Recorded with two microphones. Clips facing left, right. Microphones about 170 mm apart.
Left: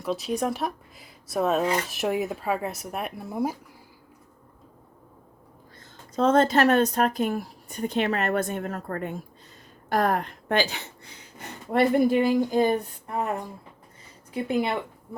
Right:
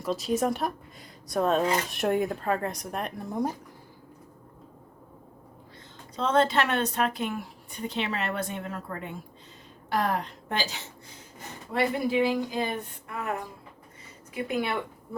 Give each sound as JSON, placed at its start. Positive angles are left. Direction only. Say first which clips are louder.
{"t": 0.0, "sound": "speech", "louder": "even", "side_deg": 0}
{"t": 6.1, "sound": "speech", "louder": "left 4 dB", "side_deg": 45}